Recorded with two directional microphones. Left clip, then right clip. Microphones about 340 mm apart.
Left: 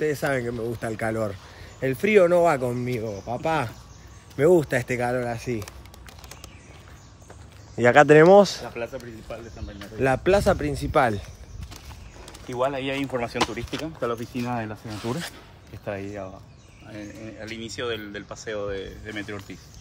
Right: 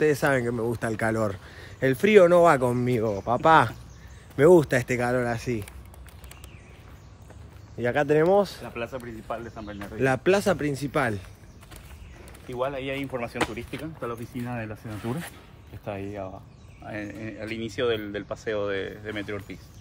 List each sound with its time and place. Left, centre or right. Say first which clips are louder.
0.0 s speech: right 2 dB; centre
7.7 s speech: left 8 dB; centre
8.7 s speech: left 1 dB; centre
12.5 s speech: left 4 dB; left
14.4 s speech: left 5 dB; centre
17.4 s speech: right 4 dB; right
18.8 s speech: right 2 dB; centre